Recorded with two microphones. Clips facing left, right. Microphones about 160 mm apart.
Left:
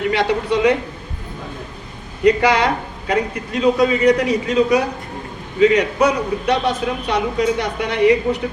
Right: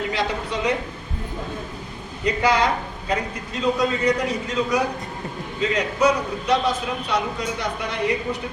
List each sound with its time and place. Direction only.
0.1 s a man's voice: 65° left (ahead or behind)
2.2 s a man's voice: 65° left (ahead or behind)